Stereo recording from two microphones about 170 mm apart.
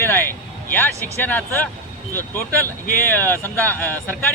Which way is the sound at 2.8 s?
55° left (ahead or behind).